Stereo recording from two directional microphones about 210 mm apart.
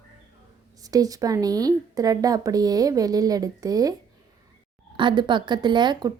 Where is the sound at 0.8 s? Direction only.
15° right (ahead or behind).